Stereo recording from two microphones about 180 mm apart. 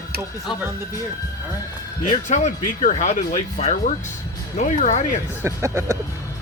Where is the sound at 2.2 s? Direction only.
40° left (ahead or behind).